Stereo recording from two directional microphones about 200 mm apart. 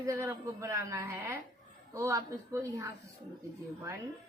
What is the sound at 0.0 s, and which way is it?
A woman's voice, 15° right (ahead or behind).